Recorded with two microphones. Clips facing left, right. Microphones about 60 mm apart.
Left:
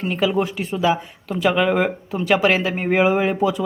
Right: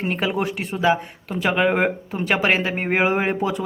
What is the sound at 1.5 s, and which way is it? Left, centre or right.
A man's voice, right.